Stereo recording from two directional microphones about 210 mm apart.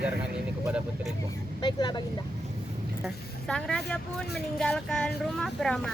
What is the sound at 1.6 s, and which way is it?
Speech, 20° left (ahead or behind).